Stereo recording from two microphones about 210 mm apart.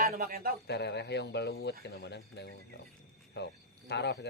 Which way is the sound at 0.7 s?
55° left (ahead or behind).